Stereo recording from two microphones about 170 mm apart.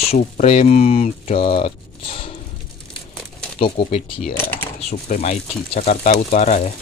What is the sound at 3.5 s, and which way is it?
Speech, 30° left (ahead or behind).